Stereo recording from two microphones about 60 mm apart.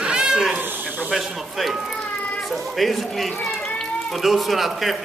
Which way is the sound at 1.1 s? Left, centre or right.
Centre.